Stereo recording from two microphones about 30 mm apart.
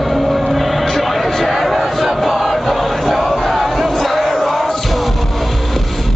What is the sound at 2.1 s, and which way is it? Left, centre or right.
Music, centre.